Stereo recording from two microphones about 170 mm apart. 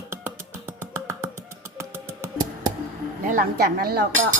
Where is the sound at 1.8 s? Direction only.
15° right (ahead or behind).